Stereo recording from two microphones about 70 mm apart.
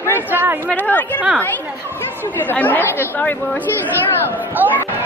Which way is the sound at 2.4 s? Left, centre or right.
Left.